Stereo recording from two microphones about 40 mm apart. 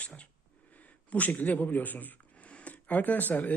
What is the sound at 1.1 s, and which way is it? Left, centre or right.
Speech, left.